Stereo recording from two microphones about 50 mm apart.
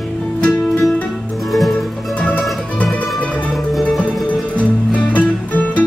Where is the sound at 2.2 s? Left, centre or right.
Left.